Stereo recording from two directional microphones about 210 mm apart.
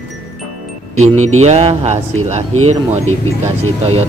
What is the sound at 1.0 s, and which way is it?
Speech, 35° right (ahead or behind).